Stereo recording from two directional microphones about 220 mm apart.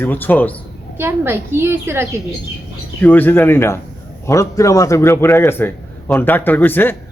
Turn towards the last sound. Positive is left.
turn(degrees=10)  # may be behind; listen again after turning